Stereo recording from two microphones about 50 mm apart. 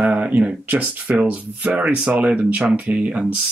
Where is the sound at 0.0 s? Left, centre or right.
Right.